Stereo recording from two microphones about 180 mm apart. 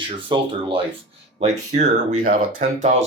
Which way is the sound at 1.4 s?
40° right (ahead or behind).